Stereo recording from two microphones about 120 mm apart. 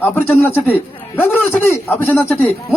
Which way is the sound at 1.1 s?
15° left (ahead or behind).